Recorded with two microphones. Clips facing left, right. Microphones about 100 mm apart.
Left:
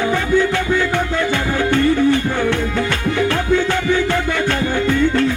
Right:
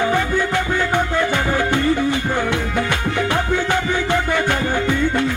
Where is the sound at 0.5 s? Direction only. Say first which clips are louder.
Left 1 dB; 15° right (ahead or behind).